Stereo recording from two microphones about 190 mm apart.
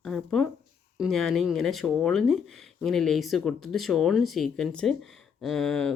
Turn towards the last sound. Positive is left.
turn(degrees=5)  # may be behind; listen again after turning